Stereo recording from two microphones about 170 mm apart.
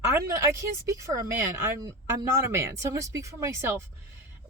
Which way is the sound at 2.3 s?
15° right (ahead or behind).